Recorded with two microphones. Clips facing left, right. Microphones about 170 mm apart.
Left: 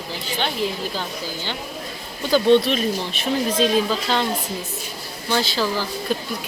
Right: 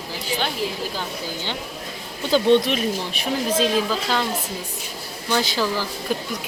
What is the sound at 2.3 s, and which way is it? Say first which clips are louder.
Speech: left 1 dB; 20° right (ahead or behind).